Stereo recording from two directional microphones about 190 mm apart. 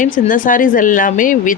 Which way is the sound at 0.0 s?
45° left (ahead or behind).